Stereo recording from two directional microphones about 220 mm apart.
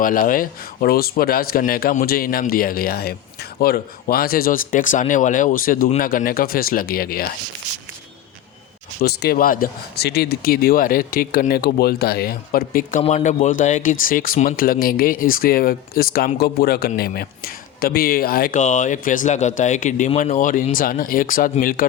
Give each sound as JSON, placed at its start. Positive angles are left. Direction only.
{"t": 0.0, "sound": "speech", "side_deg": 40}
{"t": 9.0, "sound": "speech", "side_deg": 45}
{"t": 13.0, "sound": "speech", "side_deg": 30}